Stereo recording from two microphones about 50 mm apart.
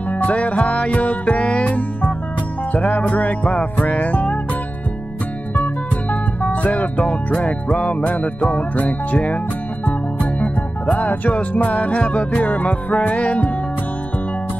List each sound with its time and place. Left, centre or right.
0.2 s music: left
6.4 s music: left
10.4 s music: left